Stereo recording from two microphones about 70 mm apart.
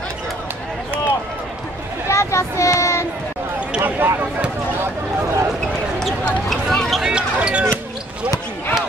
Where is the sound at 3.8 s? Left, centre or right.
Right.